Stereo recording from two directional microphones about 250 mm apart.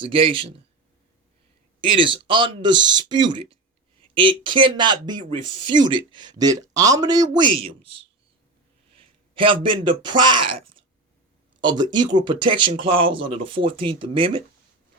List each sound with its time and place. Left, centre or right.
0.0 s speech: right
1.8 s speech: right
8.9 s speech: right
10.4 s speech: right
11.6 s speech: centre